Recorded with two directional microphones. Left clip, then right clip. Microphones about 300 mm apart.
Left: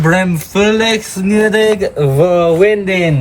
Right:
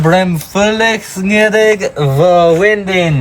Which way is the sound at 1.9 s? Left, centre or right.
Right.